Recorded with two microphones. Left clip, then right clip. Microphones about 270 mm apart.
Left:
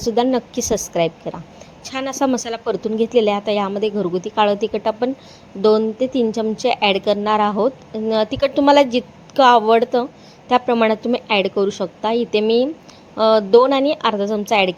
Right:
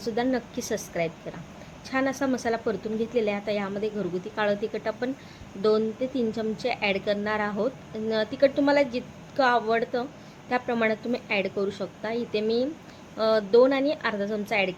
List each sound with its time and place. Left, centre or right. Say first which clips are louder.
0.0 s a woman's voice: left 10 dB; left